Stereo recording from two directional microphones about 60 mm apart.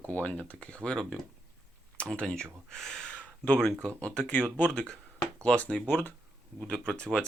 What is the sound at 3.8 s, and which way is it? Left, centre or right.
Speech, centre.